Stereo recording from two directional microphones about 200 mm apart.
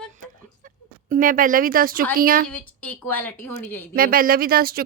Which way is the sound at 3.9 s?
45° right (ahead or behind).